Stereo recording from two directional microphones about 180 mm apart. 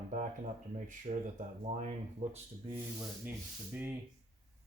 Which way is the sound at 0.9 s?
40° right (ahead or behind).